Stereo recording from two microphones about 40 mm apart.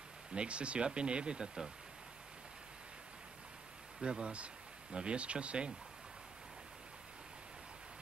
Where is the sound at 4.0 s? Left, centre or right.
Right.